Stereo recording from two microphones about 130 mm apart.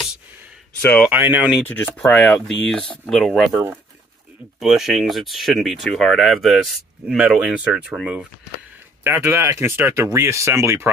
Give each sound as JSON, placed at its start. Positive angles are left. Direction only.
{"t": 1.0, "sound": "speech", "side_deg": -10}
{"t": 1.6, "sound": "speech", "side_deg": 15}
{"t": 9.0, "sound": "speech", "side_deg": -20}